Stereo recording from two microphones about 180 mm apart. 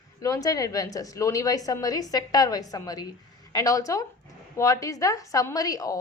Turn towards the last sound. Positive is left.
turn(degrees=20)  # may be behind; listen again after turning